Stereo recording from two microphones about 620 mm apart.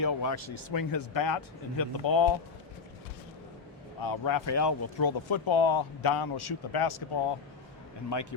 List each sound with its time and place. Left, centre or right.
0.0 s speech: left
4.0 s speech: left
5.3 s speech: left
6.0 s speech: left
8.1 s a man's voice: left